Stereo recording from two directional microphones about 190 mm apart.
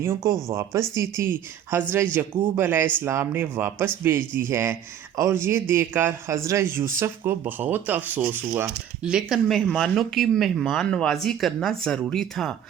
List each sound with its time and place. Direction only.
0.0 s speech: 15° right (ahead or behind); by 12.5 s centre (ahead or behind)